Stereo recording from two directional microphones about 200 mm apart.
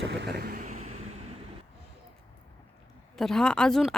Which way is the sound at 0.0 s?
60° right (ahead or behind).